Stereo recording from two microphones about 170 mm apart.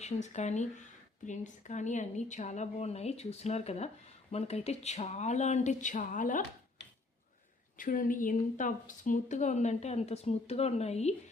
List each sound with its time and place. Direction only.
0.0 s speech: 45° left (ahead or behind)
7.8 s speech: 55° left (ahead or behind)